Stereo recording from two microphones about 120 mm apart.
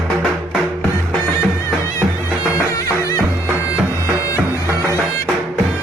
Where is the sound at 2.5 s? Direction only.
25° left (ahead or behind).